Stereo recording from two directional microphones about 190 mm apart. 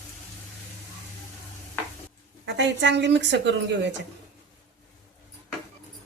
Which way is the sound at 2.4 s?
65° right (ahead or behind).